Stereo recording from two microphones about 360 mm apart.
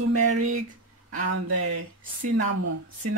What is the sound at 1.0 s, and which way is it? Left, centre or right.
Speech, right.